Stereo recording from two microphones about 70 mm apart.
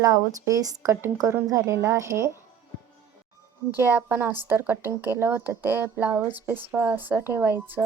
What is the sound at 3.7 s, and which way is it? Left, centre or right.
Speech, right.